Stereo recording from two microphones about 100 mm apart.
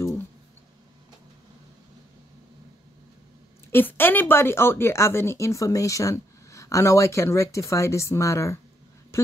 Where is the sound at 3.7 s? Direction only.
20° left (ahead or behind).